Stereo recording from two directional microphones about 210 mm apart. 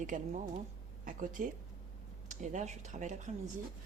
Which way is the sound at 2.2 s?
35° right (ahead or behind).